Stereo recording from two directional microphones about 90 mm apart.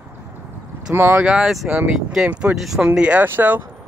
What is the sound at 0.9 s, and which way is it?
Speech, 25° right (ahead or behind).